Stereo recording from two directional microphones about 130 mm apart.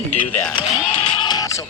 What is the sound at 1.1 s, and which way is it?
Music, 35° left (ahead or behind).